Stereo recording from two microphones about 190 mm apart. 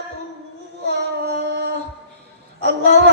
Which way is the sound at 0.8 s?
60° right (ahead or behind).